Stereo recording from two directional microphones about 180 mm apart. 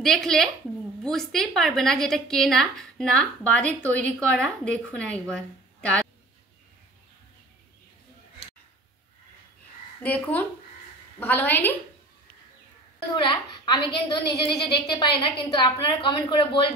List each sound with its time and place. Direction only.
0.0 s a woman's voice: centre (ahead or behind)
5.8 s a sound: 5° left (ahead or behind)
10.0 s a woman's voice: 10° left (ahead or behind)
13.1 s a woman's voice: 25° left (ahead or behind)